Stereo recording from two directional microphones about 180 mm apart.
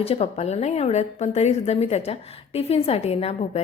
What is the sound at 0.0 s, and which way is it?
A woman's voice, 35° left (ahead or behind).